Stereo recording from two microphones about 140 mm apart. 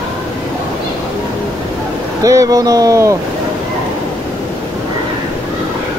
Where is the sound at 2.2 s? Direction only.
25° right (ahead or behind).